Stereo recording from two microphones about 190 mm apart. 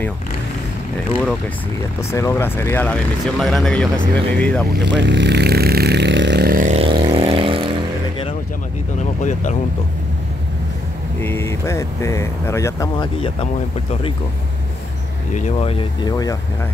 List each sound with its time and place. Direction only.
2.0 s speech: 15° left (ahead or behind)
4.7 s speech: 65° right (ahead or behind); by 6.8 s 45° right (ahead or behind)
6.8 s vehicle: 25° right (ahead or behind)
9.2 s speech: 40° left (ahead or behind)
11.1 s speech: 10° left (ahead or behind)
15.3 s speech: 35° left (ahead or behind); by 16.3 s 20° left (ahead or behind)